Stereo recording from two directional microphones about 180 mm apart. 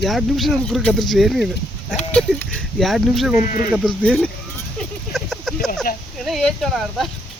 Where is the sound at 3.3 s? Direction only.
45° left (ahead or behind).